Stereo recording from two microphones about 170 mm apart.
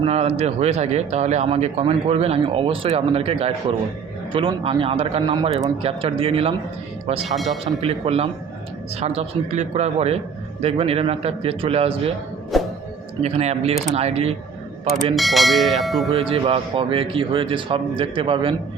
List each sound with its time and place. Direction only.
0.0 s speech: 35° right (ahead or behind)
7.3 s speech: centre (ahead or behind)
7.8 s speech: 35° right (ahead or behind)
12.5 s music: centre (ahead or behind)
13.2 s speech: 40° right (ahead or behind)
15.1 s speech: centre (ahead or behind)
16.1 s speech: 35° right (ahead or behind)